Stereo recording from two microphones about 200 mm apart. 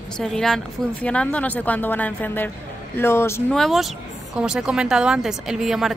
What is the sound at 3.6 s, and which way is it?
A woman's voice, centre (ahead or behind).